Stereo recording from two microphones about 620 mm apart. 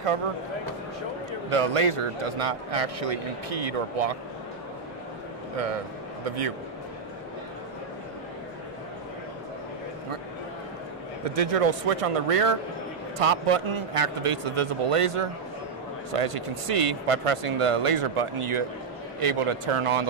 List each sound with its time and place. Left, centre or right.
1.5 s a man's voice: right
6.2 s a man's voice: right
11.2 s a man's voice: right